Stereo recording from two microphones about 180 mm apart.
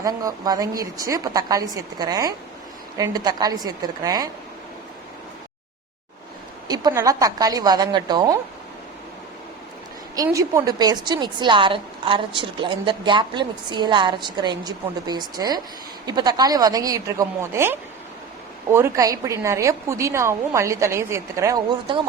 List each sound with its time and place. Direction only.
0.0 s a woman's voice: 20° right (ahead or behind)
6.7 s a woman's voice: 20° right (ahead or behind)
10.2 s a woman's voice: 15° right (ahead or behind)